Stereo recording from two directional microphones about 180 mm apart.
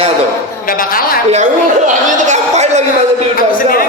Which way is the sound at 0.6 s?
50° left (ahead or behind).